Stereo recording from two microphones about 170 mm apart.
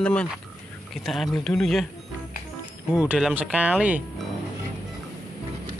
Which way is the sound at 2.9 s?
5° right (ahead or behind).